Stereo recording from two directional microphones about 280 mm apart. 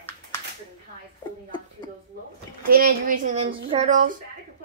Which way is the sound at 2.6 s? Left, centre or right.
Right.